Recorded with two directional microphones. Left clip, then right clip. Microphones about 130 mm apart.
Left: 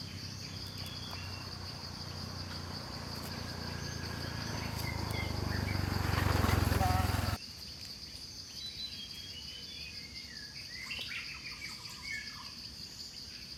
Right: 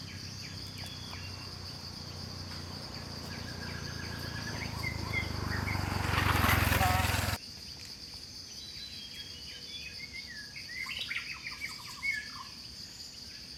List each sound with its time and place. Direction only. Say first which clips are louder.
4.2 s cricket: right 2 dB; 5° left (ahead or behind)
4.8 s cricket: right 7 dB; 10° right (ahead or behind)
5.6 s a sound: right 3 dB; 25° right (ahead or behind)